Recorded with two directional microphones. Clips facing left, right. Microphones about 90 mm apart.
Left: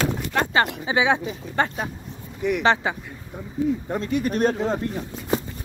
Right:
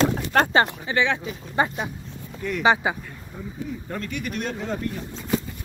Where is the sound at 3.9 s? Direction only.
30° left (ahead or behind).